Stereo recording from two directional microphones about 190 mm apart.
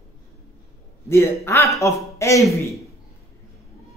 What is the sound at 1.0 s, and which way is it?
A man's voice, 15° left (ahead or behind).